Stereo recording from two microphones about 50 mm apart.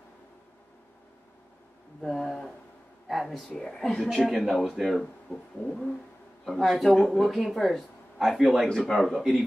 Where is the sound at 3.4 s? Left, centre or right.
Centre.